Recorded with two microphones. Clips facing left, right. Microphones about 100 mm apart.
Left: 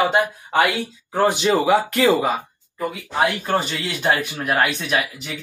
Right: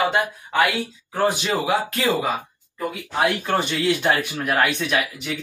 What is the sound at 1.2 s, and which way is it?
Speech, 45° left (ahead or behind).